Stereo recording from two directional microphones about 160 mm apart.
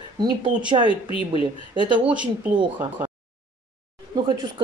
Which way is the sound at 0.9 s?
35° left (ahead or behind).